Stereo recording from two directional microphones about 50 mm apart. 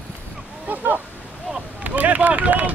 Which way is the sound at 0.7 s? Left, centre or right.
Right.